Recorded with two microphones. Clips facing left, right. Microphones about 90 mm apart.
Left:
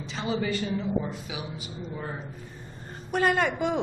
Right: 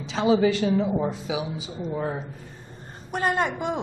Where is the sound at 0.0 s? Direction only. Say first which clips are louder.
Right 9 dB; 90° right.